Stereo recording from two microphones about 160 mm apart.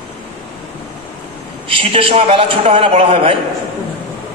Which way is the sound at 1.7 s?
35° right (ahead or behind).